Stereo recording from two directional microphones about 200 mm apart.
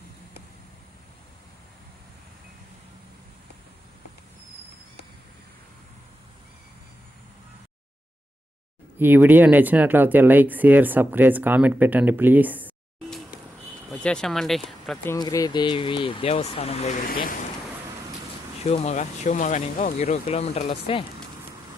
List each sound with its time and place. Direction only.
9.0 s speech: 10° right (ahead or behind)
15.1 s speech: 15° left (ahead or behind); by 17.3 s 45° left (ahead or behind)
18.6 s speech: 30° left (ahead or behind)